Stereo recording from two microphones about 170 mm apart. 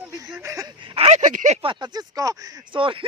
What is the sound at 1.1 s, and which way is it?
Speech, 45° right (ahead or behind).